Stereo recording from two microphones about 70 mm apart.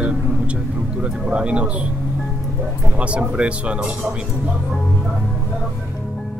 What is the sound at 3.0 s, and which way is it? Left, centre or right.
Speech, centre.